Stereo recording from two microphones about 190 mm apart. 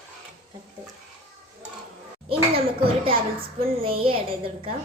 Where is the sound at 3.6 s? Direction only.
30° right (ahead or behind).